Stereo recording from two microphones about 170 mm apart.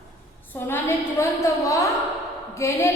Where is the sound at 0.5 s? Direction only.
15° left (ahead or behind).